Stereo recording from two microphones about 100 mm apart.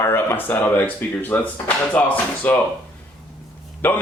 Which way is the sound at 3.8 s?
20° left (ahead or behind).